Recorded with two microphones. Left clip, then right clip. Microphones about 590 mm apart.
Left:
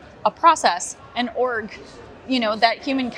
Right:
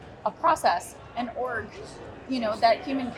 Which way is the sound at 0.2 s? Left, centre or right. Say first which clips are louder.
Left 8 dB; left.